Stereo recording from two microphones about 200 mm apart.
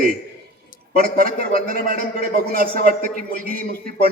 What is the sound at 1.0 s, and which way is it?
A man's voice, 45° right (ahead or behind).